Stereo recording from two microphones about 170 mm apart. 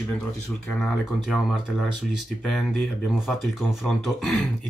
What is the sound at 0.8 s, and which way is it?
Speech, centre (ahead or behind).